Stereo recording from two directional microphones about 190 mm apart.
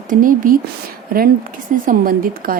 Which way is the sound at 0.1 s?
45° right (ahead or behind).